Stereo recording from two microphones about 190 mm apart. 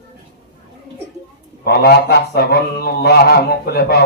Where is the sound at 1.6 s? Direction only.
55° left (ahead or behind).